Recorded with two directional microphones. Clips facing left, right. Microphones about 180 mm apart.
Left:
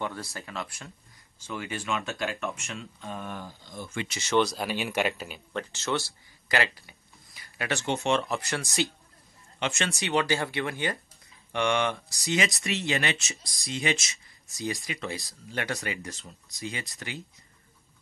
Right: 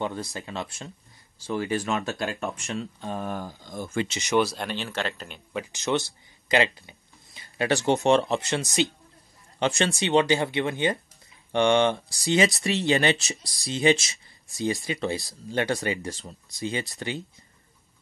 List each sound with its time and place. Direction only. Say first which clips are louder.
0.0 s speech: right 4 dB; 20° right (ahead or behind); by 4.1 s 45° right (ahead or behind)
4.1 s speech: right 2 dB; 15° right (ahead or behind)
4.4 s speech: even; centre (ahead or behind)
5.5 s speech: right 4 dB; 10° right (ahead or behind); by 8.5 s 30° right (ahead or behind)
8.5 s speech: right 4 dB; 20° right (ahead or behind)
9.6 s speech: right 6 dB; 35° right (ahead or behind)